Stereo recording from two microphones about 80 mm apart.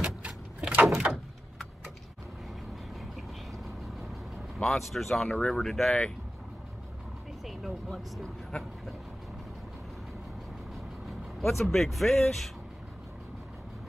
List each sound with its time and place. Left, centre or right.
0.0 s vehicle: centre
3.8 s speech: centre
7.4 s vehicle: centre
10.7 s vehicle: centre